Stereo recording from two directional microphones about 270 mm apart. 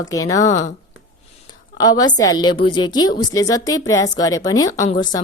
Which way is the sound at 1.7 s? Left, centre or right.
Centre.